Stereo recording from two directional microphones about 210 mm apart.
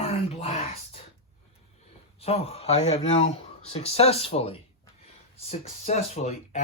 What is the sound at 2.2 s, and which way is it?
Speech, 30° left (ahead or behind).